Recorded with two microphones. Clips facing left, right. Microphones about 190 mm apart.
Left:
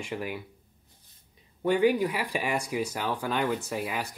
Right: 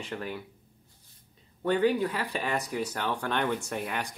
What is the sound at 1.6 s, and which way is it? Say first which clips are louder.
Speech: left 2 dB; 10° left (ahead or behind).